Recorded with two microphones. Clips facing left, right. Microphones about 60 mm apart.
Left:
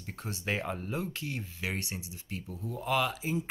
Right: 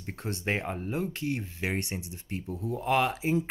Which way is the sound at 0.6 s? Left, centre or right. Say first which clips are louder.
Right 2 dB; centre.